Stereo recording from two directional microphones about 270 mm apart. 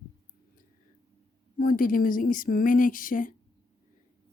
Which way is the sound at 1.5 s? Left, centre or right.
Left.